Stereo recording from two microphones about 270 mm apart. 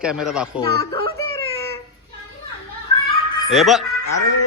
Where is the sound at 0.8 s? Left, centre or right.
Centre.